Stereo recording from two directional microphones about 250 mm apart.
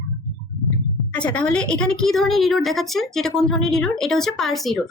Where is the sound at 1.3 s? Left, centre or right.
Centre.